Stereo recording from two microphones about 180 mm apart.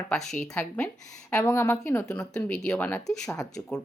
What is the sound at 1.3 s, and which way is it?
A woman's voice, 15° left (ahead or behind).